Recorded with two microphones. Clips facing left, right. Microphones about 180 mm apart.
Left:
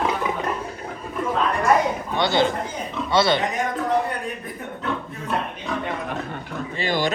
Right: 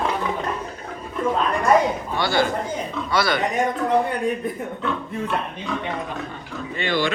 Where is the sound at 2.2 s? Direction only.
20° left (ahead or behind).